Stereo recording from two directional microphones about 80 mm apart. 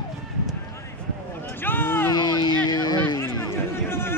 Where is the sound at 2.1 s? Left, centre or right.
Left.